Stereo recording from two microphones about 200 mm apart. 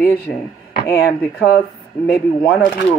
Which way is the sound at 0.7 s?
50° left (ahead or behind).